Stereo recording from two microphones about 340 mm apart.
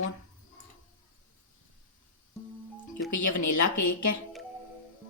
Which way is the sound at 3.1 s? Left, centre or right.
Left.